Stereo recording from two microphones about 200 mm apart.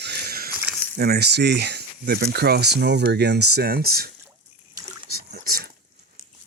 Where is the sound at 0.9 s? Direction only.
50° right (ahead or behind).